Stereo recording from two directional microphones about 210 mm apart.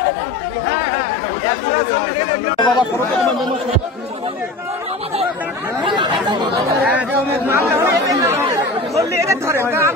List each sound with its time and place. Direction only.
2.5 s speech: 20° left (ahead or behind)
6.8 s speech: 10° right (ahead or behind)